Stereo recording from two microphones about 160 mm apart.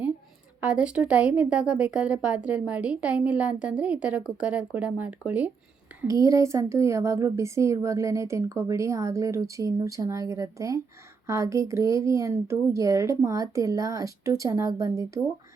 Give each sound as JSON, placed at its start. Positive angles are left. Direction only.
{"t": 0.6, "sound": "speech", "side_deg": -5}
{"t": 6.0, "sound": "a woman's voice", "side_deg": -20}